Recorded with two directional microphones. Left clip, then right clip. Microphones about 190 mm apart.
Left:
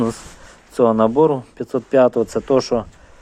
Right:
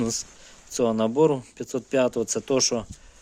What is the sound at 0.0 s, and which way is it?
Speech, 15° right (ahead or behind).